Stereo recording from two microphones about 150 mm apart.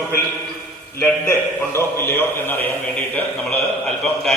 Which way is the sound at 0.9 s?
15° left (ahead or behind).